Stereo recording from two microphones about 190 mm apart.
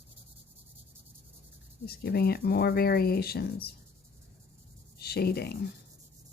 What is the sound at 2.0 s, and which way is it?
Sanding, 55° left (ahead or behind).